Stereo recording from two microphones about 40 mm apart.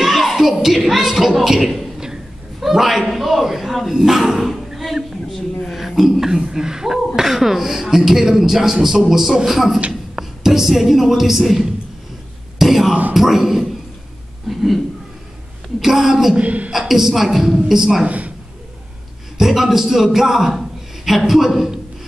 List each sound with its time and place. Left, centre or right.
0.0 s a sound: centre
2.6 s a man's voice: centre
3.2 s a sound: centre
7.2 s a man's voice: centre
12.5 s a sound: centre
13.1 s speech: centre
15.8 s a man's voice: centre
16.3 s a woman's voice: right
16.7 s a man's voice: centre
18.0 s a woman's voice: right
19.3 s a man's voice: centre